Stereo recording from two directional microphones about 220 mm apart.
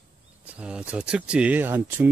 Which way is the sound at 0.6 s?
5° right (ahead or behind).